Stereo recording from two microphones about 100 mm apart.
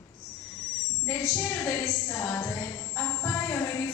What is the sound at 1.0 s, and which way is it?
A woman's voice, 20° left (ahead or behind).